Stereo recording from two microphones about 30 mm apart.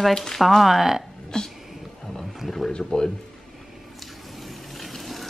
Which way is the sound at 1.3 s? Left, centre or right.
Left.